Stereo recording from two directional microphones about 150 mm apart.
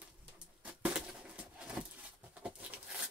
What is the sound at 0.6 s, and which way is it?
Bird, 10° right (ahead or behind).